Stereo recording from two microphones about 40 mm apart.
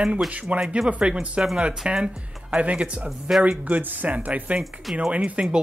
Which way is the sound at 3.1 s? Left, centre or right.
Centre.